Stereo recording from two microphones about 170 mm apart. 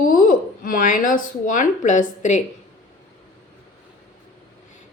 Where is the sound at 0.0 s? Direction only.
55° left (ahead or behind).